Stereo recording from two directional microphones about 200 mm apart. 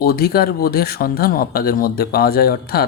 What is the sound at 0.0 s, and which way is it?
Speech, 50° left (ahead or behind).